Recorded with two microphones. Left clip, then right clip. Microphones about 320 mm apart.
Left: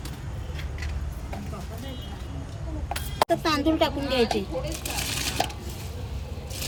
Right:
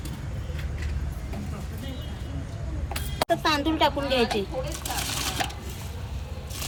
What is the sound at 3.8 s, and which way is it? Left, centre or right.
Speech, centre.